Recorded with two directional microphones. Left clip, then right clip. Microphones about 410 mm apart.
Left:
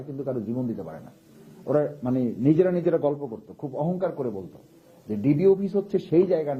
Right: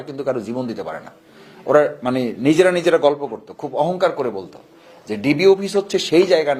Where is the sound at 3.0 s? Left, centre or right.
Centre.